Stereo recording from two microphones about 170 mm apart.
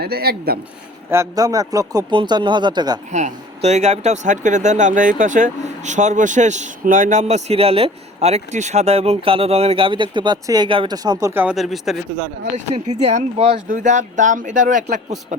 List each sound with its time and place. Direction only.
0.0 s speech: 65° right (ahead or behind)
1.1 s speech: 20° right (ahead or behind)
3.1 s speech: 45° right (ahead or behind); by 11.5 s 10° right (ahead or behind)
11.5 s a man's voice: centre (ahead or behind)
12.5 s speech: 45° right (ahead or behind)
13.7 s speech: 50° right (ahead or behind)